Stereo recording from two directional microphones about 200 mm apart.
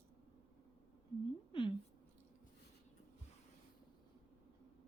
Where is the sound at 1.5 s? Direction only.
25° left (ahead or behind).